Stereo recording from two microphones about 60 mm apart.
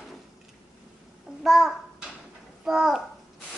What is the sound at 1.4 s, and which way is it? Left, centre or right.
Babbling, centre.